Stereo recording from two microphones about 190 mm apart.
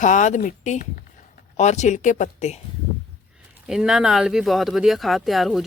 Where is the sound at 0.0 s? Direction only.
40° left (ahead or behind).